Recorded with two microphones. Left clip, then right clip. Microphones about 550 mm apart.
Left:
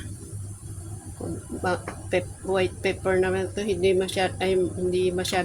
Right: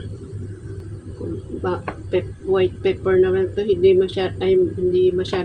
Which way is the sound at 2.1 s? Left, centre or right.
Left.